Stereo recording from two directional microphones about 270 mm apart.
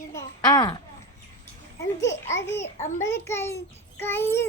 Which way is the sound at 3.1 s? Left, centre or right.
Centre.